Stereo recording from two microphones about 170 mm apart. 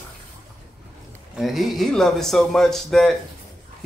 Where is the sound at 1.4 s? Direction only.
Centre (ahead or behind).